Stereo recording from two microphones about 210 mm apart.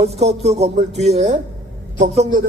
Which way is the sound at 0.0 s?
30° right (ahead or behind).